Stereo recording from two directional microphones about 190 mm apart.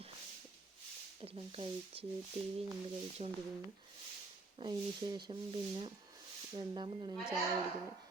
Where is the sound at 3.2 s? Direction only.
35° right (ahead or behind).